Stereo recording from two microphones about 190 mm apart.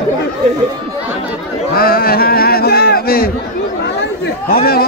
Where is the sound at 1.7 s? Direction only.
50° left (ahead or behind).